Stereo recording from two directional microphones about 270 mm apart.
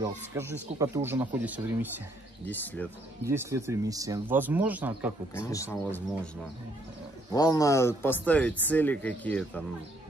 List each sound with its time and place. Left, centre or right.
0.0 s speech: centre
2.4 s speech: centre
3.3 s speech: centre
5.5 s speech: centre
7.3 s speech: centre